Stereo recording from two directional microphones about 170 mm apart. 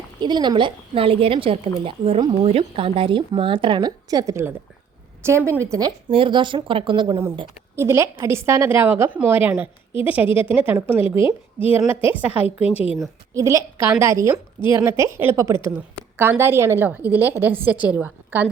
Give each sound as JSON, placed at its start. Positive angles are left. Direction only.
{"t": 0.2, "sound": "a woman's voice", "side_deg": -25}
{"t": 6.1, "sound": "a woman's voice", "side_deg": -30}
{"t": 7.8, "sound": "a woman's voice", "side_deg": -15}
{"t": 12.5, "sound": "a woman's voice", "side_deg": 35}
{"t": 13.3, "sound": "a woman's voice", "side_deg": -20}